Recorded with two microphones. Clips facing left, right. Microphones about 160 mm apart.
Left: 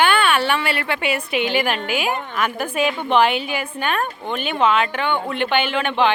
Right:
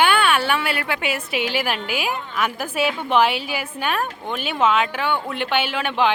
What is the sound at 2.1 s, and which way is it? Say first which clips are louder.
Speech: left 3 dB; 60° left (ahead or behind).